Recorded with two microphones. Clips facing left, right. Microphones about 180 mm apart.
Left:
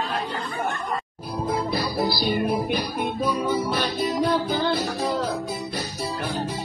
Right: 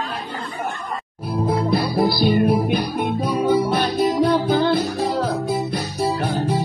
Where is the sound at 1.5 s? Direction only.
45° right (ahead or behind).